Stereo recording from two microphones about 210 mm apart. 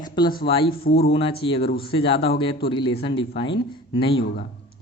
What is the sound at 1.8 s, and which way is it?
Speech, 25° left (ahead or behind).